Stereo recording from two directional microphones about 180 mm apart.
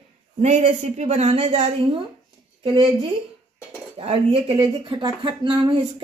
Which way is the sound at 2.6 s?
30° right (ahead or behind).